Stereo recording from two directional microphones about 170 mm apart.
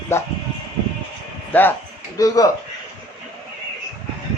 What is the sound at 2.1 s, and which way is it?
Speech, 20° left (ahead or behind).